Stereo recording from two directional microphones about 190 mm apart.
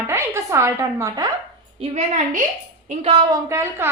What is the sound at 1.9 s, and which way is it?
A woman's voice, 35° right (ahead or behind).